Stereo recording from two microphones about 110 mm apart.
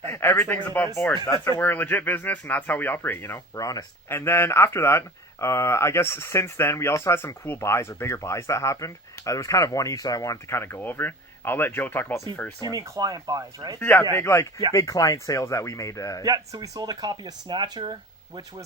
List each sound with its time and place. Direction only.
0.1 s speech: 20° left (ahead or behind)
3.5 s speech: 35° left (ahead or behind)
4.1 s speech: 25° left (ahead or behind)
12.5 s speech: 35° right (ahead or behind)
13.7 s speech: 15° left (ahead or behind)
16.2 s speech: 35° right (ahead or behind)